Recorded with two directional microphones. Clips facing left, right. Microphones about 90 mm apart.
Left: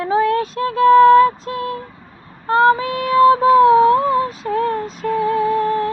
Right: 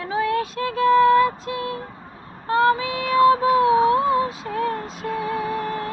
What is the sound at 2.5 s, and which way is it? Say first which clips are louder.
Child singing: left 5 dB; 35° left (ahead or behind).